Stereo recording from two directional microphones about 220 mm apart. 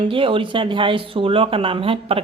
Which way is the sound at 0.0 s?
25° right (ahead or behind).